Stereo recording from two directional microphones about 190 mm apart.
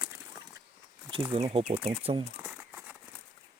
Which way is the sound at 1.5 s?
35° right (ahead or behind).